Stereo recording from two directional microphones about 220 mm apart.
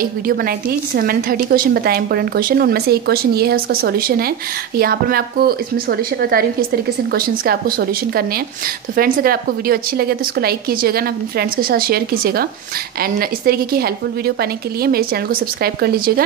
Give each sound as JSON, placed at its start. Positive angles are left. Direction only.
{"t": 0.0, "sound": "a woman's voice", "side_deg": -40}